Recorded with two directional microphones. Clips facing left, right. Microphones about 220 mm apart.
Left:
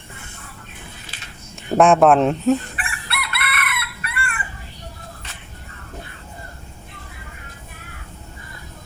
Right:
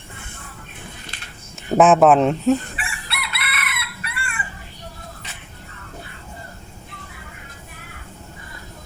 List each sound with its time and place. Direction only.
1.7 s speech: centre (ahead or behind)
2.7 s chicken: 55° left (ahead or behind)